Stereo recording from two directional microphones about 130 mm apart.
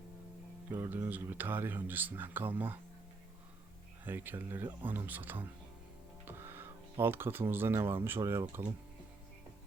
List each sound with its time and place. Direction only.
0.7 s speech: 20° right (ahead or behind)
4.0 s speech: 15° right (ahead or behind)